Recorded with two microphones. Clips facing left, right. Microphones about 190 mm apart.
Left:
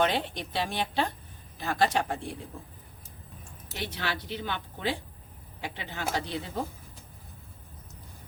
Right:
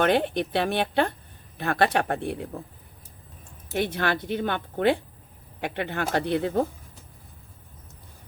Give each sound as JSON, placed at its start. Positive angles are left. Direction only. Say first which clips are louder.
{"t": 0.0, "sound": "speech", "louder": "right 6 dB", "side_deg": -55}
{"t": 3.7, "sound": "speech", "louder": "right 9 dB", "side_deg": -55}